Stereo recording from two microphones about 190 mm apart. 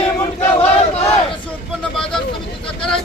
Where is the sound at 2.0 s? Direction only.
5° left (ahead or behind).